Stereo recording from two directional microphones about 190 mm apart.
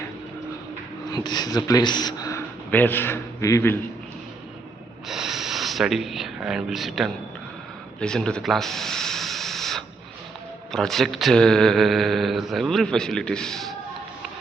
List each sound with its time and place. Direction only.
1.1 s a man's voice: 20° left (ahead or behind)
5.0 s speech: centre (ahead or behind)
8.0 s a sound: 5° left (ahead or behind)
10.7 s speech: centre (ahead or behind)